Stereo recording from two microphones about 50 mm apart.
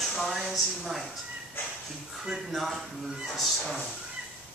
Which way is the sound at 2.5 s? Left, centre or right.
Centre.